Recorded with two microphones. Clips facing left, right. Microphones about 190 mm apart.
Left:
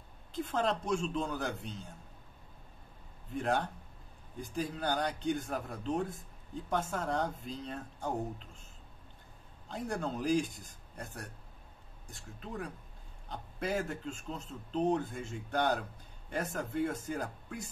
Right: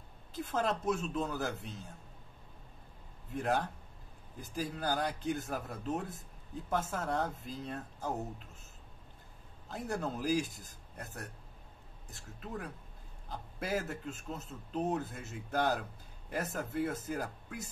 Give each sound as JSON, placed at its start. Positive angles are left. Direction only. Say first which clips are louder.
{"t": 0.3, "sound": "a man's voice", "louder": "left 1 dB", "side_deg": -5}
{"t": 3.3, "sound": "a man's voice", "louder": "left 1 dB", "side_deg": -5}
{"t": 9.7, "sound": "a man's voice", "louder": "left 1 dB", "side_deg": -5}